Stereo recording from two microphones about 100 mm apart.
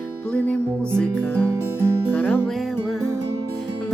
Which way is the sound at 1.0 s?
15° left (ahead or behind).